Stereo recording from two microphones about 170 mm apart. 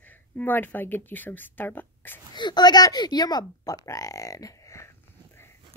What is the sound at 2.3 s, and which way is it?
Speech, 25° left (ahead or behind).